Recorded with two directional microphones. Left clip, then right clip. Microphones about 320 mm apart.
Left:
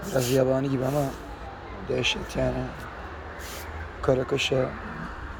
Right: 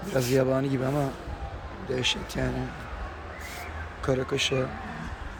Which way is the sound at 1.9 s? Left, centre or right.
Centre.